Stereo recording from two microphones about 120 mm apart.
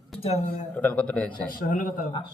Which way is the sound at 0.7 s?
10° left (ahead or behind).